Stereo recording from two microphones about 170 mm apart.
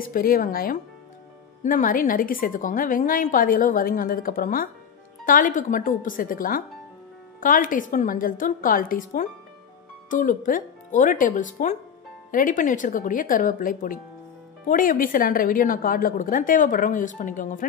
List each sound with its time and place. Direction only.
0.0 s a woman's voice: 55° left (ahead or behind)